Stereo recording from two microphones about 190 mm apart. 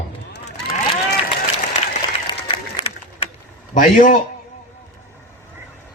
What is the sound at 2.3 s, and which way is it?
Applause, 25° left (ahead or behind).